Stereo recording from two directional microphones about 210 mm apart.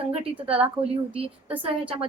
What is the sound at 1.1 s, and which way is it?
Speech, 25° right (ahead or behind).